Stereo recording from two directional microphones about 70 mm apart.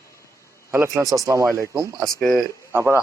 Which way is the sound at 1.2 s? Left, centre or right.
Right.